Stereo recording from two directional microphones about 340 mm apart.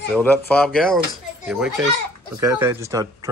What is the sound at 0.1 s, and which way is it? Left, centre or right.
Speech, centre.